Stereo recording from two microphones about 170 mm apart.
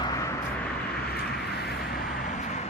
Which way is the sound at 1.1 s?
70° left (ahead or behind).